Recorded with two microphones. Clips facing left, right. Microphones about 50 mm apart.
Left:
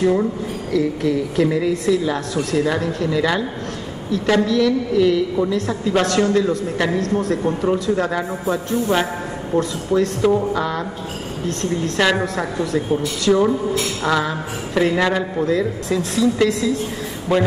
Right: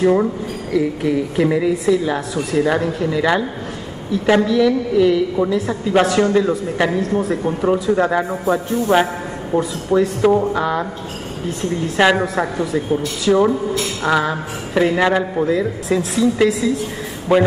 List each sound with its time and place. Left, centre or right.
0.0 s a man's voice: centre
9.9 s a man's voice: centre